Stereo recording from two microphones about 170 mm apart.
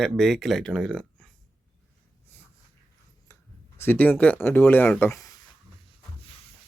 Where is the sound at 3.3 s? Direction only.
20° left (ahead or behind).